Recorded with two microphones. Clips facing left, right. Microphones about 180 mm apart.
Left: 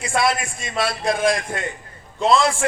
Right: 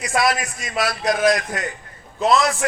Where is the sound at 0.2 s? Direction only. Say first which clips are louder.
Even; 25° left (ahead or behind).